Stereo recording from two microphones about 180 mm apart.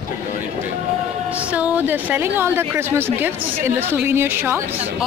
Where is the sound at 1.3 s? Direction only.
5° right (ahead or behind).